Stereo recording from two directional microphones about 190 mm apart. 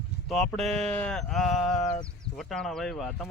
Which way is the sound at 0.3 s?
5° left (ahead or behind).